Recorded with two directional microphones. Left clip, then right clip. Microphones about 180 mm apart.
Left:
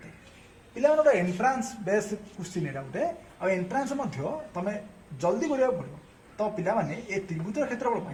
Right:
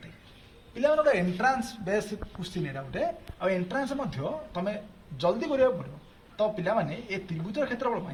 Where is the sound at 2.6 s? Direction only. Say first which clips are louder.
Even; 30° left (ahead or behind).